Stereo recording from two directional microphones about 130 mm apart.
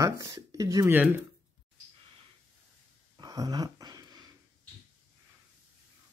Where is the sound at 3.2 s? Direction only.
30° right (ahead or behind).